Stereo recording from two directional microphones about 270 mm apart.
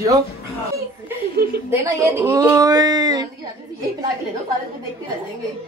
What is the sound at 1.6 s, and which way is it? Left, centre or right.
A man's voice, centre.